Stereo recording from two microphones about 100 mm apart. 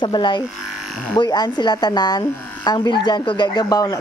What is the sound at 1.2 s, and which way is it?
Speech, 45° left (ahead or behind).